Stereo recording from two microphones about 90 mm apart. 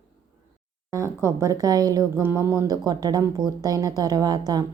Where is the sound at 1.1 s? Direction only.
30° right (ahead or behind).